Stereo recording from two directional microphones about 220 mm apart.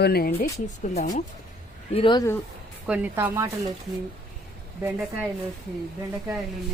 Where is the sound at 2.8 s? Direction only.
5° right (ahead or behind).